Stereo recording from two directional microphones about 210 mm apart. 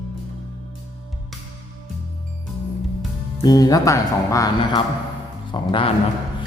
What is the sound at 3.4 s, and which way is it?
Speech, 20° left (ahead or behind).